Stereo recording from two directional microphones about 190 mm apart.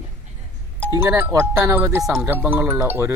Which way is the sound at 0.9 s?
15° right (ahead or behind).